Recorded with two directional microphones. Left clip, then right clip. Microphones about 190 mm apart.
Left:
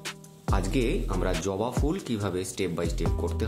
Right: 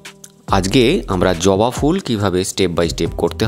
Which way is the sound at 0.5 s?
55° right (ahead or behind).